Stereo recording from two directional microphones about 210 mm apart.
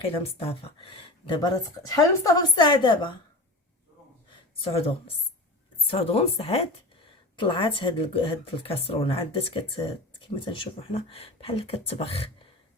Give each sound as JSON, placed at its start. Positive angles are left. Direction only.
{"t": 0.0, "sound": "speech", "side_deg": 25}
{"t": 4.6, "sound": "speech", "side_deg": 25}